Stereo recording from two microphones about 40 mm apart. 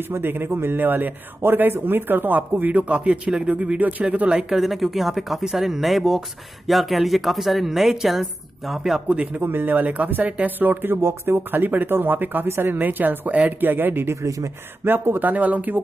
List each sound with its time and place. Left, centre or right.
0.0 s speech: right
4.4 s speech: centre
9.1 s speech: right
9.4 s speech: right
12.7 s speech: right
14.8 s speech: right
15.1 s speech: right